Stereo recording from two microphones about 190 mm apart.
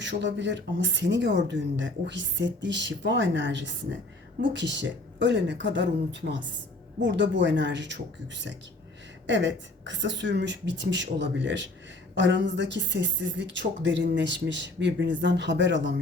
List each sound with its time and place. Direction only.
0.0 s speech: 70° right (ahead or behind)